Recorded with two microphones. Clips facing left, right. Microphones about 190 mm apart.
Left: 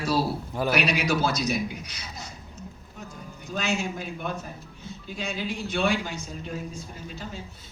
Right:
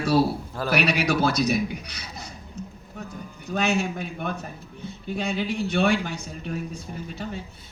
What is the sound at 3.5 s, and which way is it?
A man's voice, 60° right (ahead or behind).